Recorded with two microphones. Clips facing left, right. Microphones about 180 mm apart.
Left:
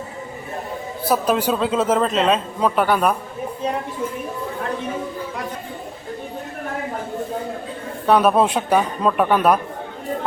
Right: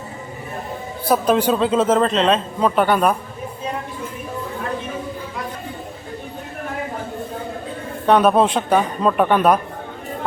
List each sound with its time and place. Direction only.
1.0 s a man's voice: 5° left (ahead or behind)
8.0 s a man's voice: 5° left (ahead or behind)